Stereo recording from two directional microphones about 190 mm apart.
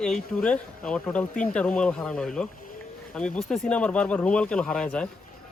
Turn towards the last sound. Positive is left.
turn(degrees=5)  # may be behind; listen again after turning